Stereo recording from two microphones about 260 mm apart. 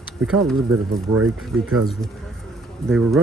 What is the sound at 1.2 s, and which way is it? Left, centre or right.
Speech, right.